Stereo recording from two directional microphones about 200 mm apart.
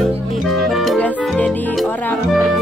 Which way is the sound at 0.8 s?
5° left (ahead or behind).